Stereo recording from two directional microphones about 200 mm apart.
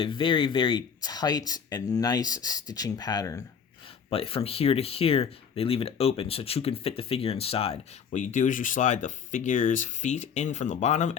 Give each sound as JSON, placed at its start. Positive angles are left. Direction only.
{"t": 0.0, "sound": "speech", "side_deg": 25}
{"t": 4.1, "sound": "speech", "side_deg": 30}